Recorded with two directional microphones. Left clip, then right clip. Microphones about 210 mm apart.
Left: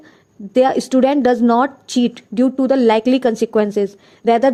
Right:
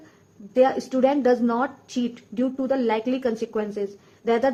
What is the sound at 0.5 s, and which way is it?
A woman's voice, 40° left (ahead or behind).